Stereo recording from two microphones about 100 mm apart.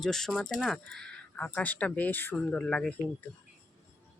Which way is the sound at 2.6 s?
10° left (ahead or behind).